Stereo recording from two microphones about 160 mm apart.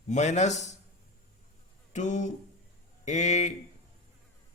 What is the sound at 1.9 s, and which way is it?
A man's voice, 50° left (ahead or behind).